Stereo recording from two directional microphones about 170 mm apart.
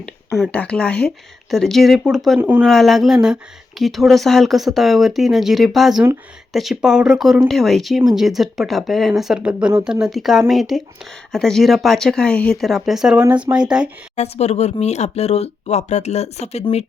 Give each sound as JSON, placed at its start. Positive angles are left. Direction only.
{"t": 0.0, "sound": "speech", "side_deg": 0}
{"t": 2.6, "sound": "speech", "side_deg": 0}
{"t": 14.2, "sound": "speech", "side_deg": 40}